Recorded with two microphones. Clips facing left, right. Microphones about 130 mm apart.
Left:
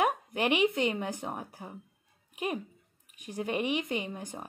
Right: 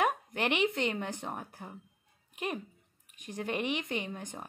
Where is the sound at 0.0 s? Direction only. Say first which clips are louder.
Left 2 dB; 5° left (ahead or behind).